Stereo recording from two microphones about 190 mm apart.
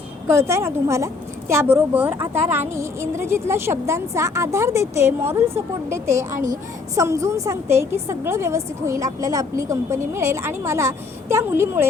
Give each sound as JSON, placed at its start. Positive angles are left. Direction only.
{"t": 0.3, "sound": "a woman's voice", "side_deg": -15}